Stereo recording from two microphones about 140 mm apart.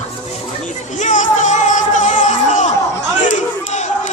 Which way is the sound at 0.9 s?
60° left (ahead or behind).